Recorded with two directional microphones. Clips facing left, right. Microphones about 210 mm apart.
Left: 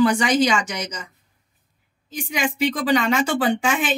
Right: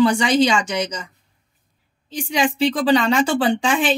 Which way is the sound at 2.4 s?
30° right (ahead or behind).